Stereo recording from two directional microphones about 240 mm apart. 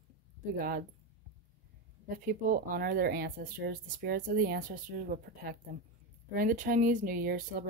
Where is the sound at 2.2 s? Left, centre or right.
Right.